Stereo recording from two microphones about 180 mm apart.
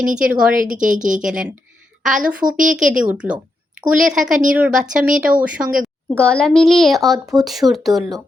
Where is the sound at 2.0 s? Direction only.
45° right (ahead or behind).